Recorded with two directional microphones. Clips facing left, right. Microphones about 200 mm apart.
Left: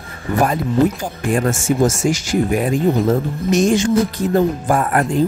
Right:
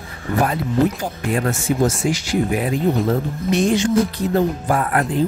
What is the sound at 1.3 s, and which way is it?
Speech, 45° left (ahead or behind).